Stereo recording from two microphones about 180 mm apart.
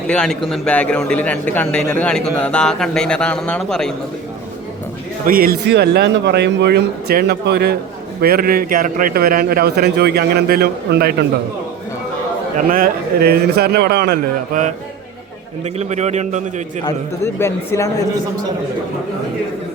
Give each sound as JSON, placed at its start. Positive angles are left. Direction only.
{"t": 0.1, "sound": "a man's voice", "side_deg": 5}
{"t": 5.2, "sound": "a man's voice", "side_deg": -55}
{"t": 12.5, "sound": "a man's voice", "side_deg": -50}
{"t": 15.6, "sound": "a man's voice", "side_deg": -40}
{"t": 16.8, "sound": "a man's voice", "side_deg": 15}